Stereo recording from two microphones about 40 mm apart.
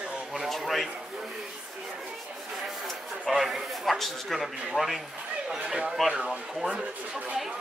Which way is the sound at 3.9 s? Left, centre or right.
Centre.